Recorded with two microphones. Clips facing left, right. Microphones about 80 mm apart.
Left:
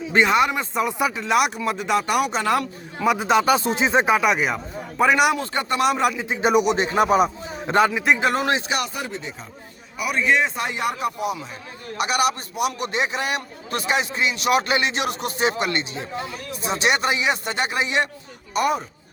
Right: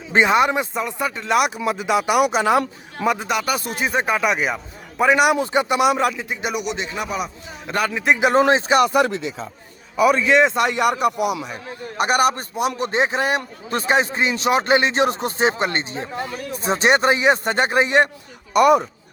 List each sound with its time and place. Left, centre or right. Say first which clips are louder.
0.1 s speech: right 2 dB; right
0.9 s speech: left 2 dB; centre
1.1 s speech: right 1 dB; centre
3.2 s speech: left 5 dB; left
4.2 s a man's voice: even; centre
5.4 s speech: right 4 dB; centre
5.9 s speech: right 1 dB; centre
6.2 s speech: left 5 dB; left
6.5 s speech: left 11 dB; left
7.7 s speech: left 4 dB; left
8.4 s a man's voice: right 7 dB; right
8.9 s speech: right 11 dB; right
11.9 s a man's voice: right 4 dB; right
18.5 s speech: right 8 dB; right